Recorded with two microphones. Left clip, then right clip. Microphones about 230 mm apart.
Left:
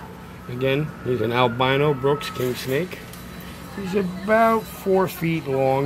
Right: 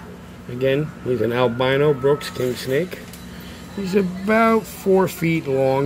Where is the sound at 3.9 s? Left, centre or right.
Right.